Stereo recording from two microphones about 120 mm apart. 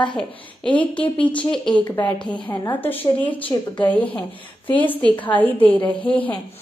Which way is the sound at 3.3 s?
45° left (ahead or behind).